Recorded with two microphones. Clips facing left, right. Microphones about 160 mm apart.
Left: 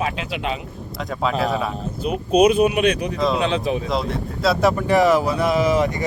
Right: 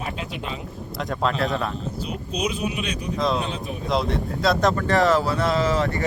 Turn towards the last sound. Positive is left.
turn(degrees=15)  # may be behind; listen again after turning